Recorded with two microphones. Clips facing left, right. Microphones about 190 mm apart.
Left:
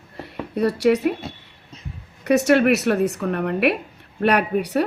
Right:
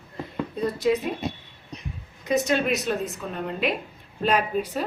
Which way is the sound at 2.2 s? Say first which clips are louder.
Left 7 dB; 70° left (ahead or behind).